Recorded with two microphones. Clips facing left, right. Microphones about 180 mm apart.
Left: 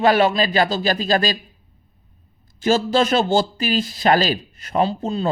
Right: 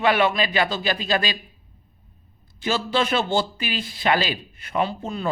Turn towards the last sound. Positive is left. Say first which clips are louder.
# left 5 dB
turn(degrees=30)  # may be behind; listen again after turning